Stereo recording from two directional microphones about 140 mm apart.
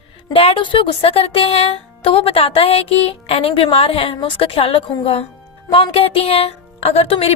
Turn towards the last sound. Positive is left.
turn(degrees=45)  # may be behind; listen again after turning